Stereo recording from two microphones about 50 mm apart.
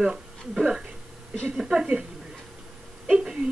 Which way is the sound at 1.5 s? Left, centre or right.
Centre.